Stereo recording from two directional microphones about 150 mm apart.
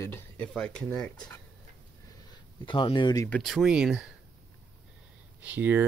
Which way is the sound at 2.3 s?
35° left (ahead or behind).